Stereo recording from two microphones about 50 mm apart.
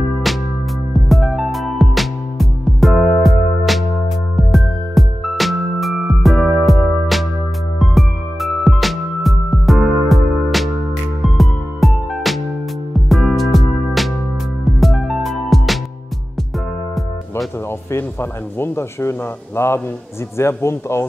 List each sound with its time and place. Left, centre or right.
0.9 s music: centre
17.6 s speech: left